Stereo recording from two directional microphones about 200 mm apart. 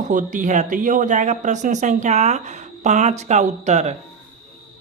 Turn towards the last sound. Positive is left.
turn(degrees=-35)  # may be behind; listen again after turning